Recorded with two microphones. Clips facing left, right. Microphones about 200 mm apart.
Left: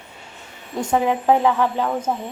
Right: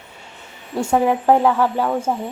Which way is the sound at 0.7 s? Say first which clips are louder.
Right 2 dB; 10° right (ahead or behind).